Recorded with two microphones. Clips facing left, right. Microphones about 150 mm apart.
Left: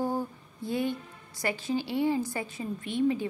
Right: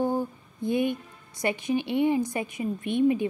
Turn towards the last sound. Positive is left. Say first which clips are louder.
# right 4 dB
turn(degrees=-20)  # may be behind; listen again after turning